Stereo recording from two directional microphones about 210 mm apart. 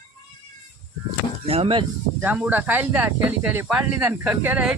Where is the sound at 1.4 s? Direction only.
30° right (ahead or behind).